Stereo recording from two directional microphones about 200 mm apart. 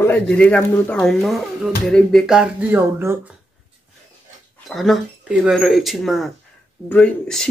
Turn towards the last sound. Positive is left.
turn(degrees=5)  # may be behind; listen again after turning